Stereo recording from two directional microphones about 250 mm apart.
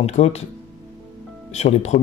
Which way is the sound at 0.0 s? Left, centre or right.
Left.